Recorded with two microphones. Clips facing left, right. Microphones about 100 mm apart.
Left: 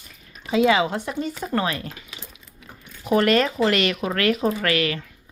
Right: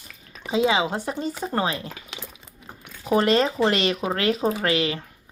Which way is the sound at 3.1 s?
30° right (ahead or behind).